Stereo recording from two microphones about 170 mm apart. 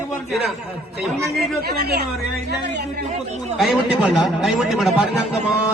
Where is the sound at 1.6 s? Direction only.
65° right (ahead or behind).